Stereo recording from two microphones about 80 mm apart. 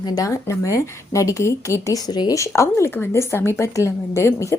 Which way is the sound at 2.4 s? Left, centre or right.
Left.